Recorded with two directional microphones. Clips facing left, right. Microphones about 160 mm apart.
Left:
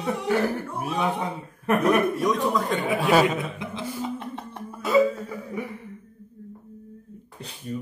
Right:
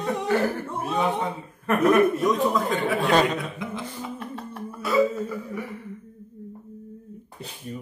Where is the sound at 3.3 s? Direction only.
20° left (ahead or behind).